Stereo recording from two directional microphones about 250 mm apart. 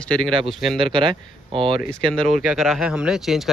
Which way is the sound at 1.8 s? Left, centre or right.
Left.